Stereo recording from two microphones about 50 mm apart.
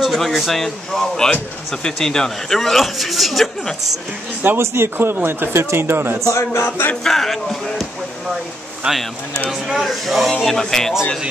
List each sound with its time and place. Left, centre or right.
0.0 s a man's voice: centre
4.6 s a man's voice: right
5.5 s speech: right
6.3 s speech: left
7.0 s a man's voice: centre
8.8 s speech: centre
9.5 s a man's voice: centre